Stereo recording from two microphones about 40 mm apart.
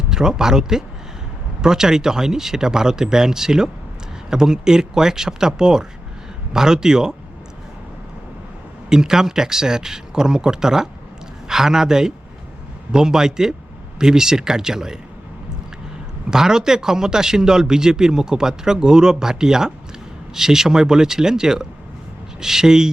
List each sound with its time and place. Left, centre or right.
0.1 s speech: centre
8.9 s speech: centre
16.3 s speech: centre